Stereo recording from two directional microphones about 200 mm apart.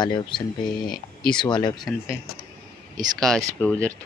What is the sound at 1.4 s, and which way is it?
Speech, 20° left (ahead or behind).